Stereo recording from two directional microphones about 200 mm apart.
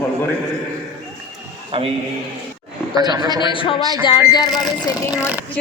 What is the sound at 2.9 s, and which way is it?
Speech, 20° right (ahead or behind).